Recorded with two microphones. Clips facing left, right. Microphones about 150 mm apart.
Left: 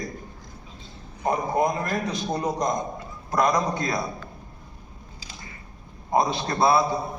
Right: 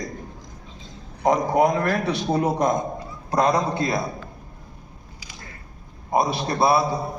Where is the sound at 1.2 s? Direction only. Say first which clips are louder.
Right 5 dB; 90° right; by 2.7 s 70° right (ahead or behind).